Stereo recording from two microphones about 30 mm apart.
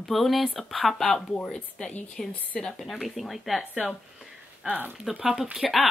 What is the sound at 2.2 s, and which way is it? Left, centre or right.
Speech, centre.